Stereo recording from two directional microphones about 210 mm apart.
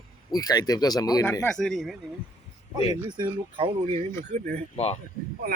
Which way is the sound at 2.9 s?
20° right (ahead or behind).